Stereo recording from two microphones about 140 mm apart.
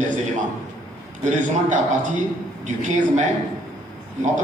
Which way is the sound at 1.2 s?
60° right (ahead or behind).